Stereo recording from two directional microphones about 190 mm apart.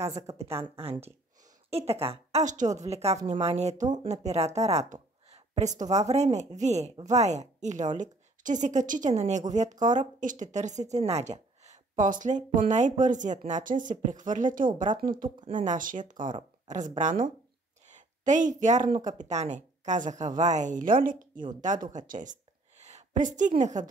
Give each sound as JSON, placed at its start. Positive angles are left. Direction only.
{"t": 0.3, "sound": "a woman's voice", "side_deg": -15}
{"t": 0.7, "sound": "a woman's voice", "side_deg": -30}
{"t": 21.9, "sound": "a sound", "side_deg": -45}
{"t": 23.5, "sound": "a woman's voice", "side_deg": -40}